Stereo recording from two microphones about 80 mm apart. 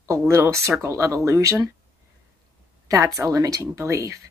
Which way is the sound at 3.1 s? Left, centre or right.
Right.